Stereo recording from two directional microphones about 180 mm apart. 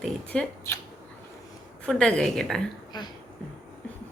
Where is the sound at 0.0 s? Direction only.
5° left (ahead or behind).